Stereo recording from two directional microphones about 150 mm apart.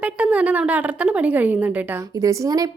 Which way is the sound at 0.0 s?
10° right (ahead or behind).